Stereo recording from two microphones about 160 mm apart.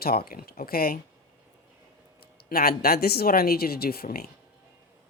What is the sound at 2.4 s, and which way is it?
A woman's voice, 70° left (ahead or behind).